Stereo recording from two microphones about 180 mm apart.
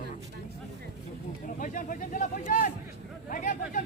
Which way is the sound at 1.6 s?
45° left (ahead or behind).